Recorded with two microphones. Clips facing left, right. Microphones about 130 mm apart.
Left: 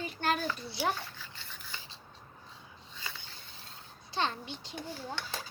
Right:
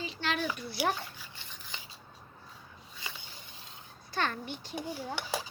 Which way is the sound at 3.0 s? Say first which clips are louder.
Even; 15° right (ahead or behind).